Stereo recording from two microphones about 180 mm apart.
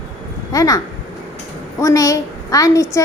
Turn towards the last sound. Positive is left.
turn(degrees=20)  # may be behind; listen again after turning